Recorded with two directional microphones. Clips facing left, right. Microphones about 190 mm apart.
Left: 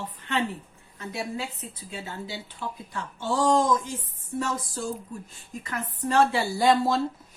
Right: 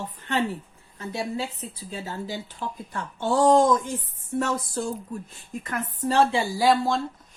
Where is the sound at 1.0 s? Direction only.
30° right (ahead or behind); by 4.9 s 60° right (ahead or behind).